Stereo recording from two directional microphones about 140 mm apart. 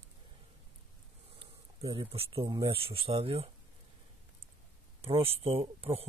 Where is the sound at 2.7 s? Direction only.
40° right (ahead or behind).